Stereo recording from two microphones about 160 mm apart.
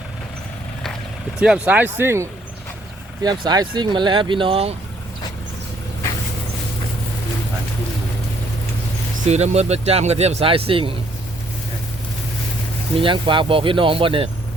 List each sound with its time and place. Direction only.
1.4 s speech: 5° right (ahead or behind)
3.2 s speech: 25° right (ahead or behind)
9.2 s speech: 45° right (ahead or behind)
13.0 s speech: 30° right (ahead or behind)